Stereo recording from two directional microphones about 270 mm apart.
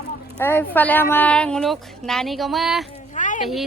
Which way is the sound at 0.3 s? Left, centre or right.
Centre.